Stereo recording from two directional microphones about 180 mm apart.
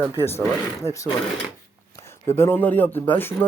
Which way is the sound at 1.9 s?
15° left (ahead or behind).